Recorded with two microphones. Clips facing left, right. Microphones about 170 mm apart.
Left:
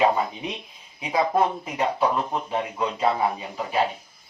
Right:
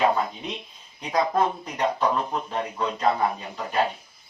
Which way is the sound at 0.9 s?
5° left (ahead or behind).